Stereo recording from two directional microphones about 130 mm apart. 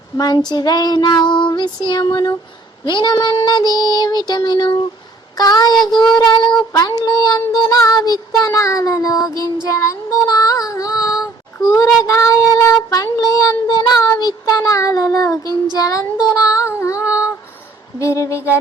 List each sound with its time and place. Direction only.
0.2 s child singing: 30° left (ahead or behind)
17.1 s female singing: 10° right (ahead or behind)
18.0 s child singing: 20° left (ahead or behind)